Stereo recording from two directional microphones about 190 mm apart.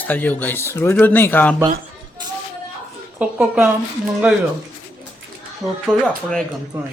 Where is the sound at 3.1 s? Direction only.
5° right (ahead or behind).